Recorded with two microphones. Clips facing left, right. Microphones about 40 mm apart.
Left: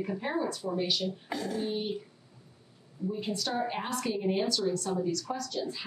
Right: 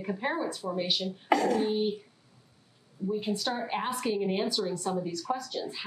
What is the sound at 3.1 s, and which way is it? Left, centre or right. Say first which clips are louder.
A woman's voice: right 3 dB; centre.